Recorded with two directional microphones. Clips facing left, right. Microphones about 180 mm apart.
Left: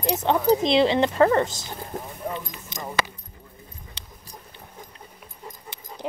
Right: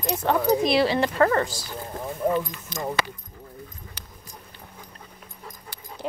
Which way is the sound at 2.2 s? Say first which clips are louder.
Right 9 dB; 50° right (ahead or behind).